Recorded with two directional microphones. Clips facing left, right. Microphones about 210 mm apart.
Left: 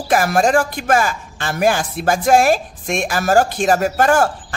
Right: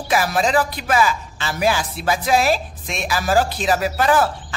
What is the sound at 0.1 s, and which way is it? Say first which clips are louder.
Speech: left 4 dB; 50° left (ahead or behind).